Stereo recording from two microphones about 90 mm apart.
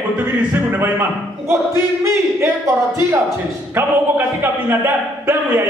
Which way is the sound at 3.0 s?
30° right (ahead or behind).